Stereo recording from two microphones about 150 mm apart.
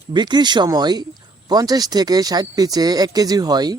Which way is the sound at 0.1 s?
30° right (ahead or behind).